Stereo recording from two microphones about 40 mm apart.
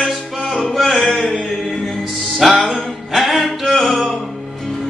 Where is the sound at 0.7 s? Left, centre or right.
Centre.